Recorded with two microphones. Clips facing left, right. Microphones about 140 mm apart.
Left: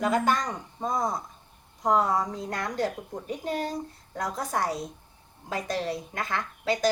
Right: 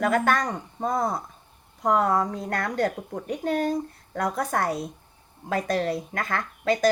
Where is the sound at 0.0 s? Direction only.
60° right (ahead or behind).